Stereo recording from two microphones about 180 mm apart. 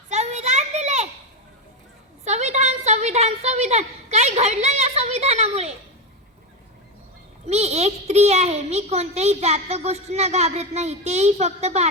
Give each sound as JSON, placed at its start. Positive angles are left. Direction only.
{"t": 0.1, "sound": "children playing", "side_deg": -40}
{"t": 2.2, "sound": "a woman's voice", "side_deg": -40}
{"t": 7.4, "sound": "a child's voice", "side_deg": -35}